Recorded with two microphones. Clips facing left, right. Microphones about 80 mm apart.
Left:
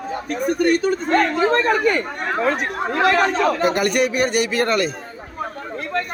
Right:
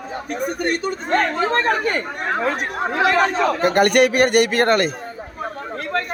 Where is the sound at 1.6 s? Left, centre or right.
Right.